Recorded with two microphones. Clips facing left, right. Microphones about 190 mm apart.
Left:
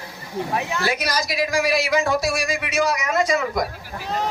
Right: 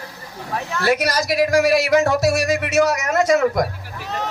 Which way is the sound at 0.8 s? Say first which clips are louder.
Right 5 dB; 65° right (ahead or behind).